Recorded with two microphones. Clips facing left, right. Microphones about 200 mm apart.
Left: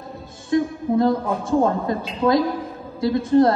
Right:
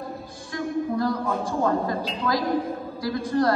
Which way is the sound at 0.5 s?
25° left (ahead or behind).